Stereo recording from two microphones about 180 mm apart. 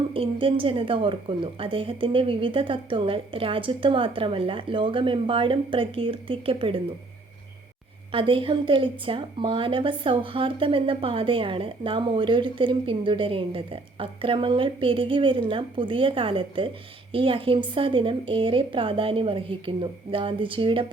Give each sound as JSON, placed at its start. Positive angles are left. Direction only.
{"t": 0.1, "sound": "a woman's voice", "side_deg": -30}
{"t": 8.1, "sound": "a woman's voice", "side_deg": -30}